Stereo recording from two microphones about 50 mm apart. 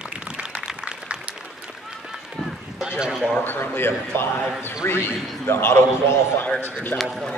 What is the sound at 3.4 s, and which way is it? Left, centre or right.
A man's voice, left.